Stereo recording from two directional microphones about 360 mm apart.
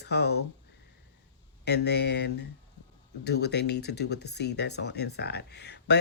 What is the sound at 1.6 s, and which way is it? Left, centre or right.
Speech, left.